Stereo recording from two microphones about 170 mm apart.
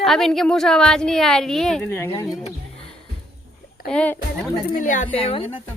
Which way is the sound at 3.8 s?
5° left (ahead or behind).